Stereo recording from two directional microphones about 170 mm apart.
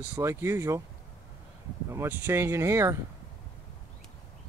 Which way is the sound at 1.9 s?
15° right (ahead or behind).